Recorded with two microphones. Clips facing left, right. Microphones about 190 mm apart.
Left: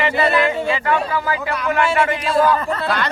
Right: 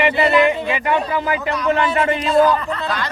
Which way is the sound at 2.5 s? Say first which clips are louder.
Left 1 dB; 40° left (ahead or behind).